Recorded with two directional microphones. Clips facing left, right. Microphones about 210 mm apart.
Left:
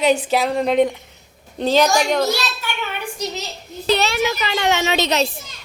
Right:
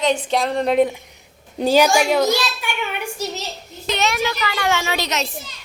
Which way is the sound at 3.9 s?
35° left (ahead or behind).